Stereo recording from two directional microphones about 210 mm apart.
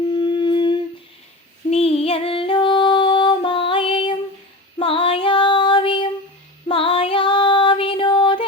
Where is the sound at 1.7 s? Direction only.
30° left (ahead or behind).